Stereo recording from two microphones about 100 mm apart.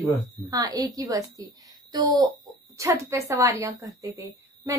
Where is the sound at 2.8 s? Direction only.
30° right (ahead or behind).